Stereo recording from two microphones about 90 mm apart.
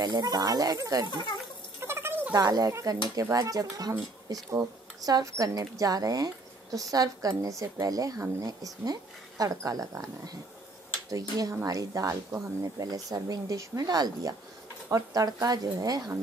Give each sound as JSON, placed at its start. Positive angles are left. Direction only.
{"t": 0.0, "sound": "speech", "side_deg": -50}
{"t": 1.1, "sound": "speech", "side_deg": 60}
{"t": 1.8, "sound": "a sound", "side_deg": -30}
{"t": 2.3, "sound": "speech", "side_deg": -45}